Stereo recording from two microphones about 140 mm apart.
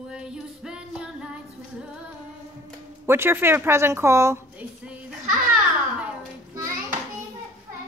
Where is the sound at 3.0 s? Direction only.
15° right (ahead or behind).